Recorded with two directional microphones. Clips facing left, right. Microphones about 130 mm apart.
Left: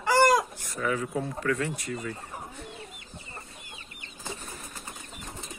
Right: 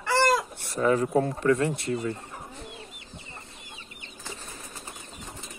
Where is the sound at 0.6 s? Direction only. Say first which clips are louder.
Right 6 dB; 35° right (ahead or behind).